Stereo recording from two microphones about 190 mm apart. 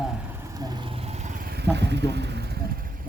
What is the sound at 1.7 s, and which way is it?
Speech, 65° right (ahead or behind).